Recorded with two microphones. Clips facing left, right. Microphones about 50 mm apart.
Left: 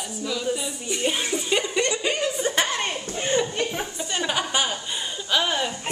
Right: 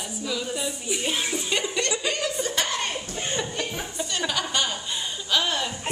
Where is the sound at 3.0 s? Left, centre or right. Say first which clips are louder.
Left 5 dB; left.